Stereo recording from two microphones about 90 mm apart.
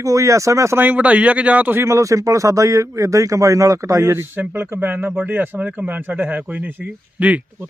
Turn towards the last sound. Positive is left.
turn(degrees=-15)  # may be behind; listen again after turning